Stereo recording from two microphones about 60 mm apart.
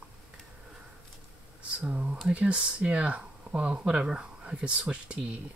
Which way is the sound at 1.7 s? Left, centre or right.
Right.